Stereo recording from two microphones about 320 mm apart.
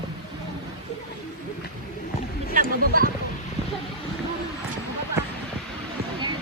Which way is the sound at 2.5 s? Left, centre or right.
Right.